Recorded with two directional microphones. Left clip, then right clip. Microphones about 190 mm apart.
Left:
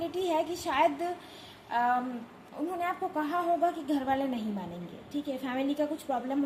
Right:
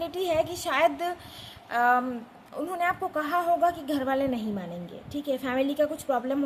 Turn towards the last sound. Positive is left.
turn(degrees=-30)  # may be behind; listen again after turning